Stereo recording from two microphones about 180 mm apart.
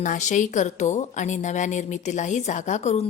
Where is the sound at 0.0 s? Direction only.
45° left (ahead or behind).